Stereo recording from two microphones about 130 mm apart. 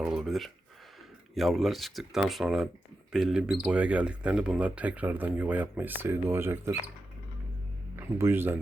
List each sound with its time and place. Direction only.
0.0 s speech: 5° right (ahead or behind)
7.9 s speech: 20° right (ahead or behind)